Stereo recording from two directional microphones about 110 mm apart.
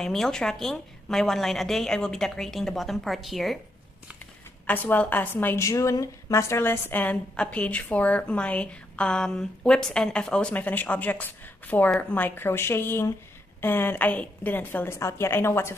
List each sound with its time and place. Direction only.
0.0 s a woman's voice: 5° left (ahead or behind)
4.6 s a woman's voice: 15° left (ahead or behind)
5.6 s a woman's voice: 30° left (ahead or behind)